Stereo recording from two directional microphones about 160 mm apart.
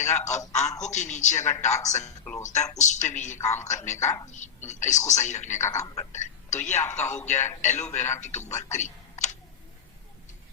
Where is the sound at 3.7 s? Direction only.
20° left (ahead or behind).